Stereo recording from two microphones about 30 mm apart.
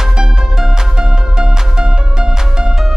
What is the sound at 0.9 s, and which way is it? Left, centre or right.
Music, right.